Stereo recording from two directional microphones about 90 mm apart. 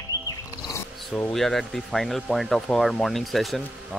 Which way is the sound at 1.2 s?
5° left (ahead or behind).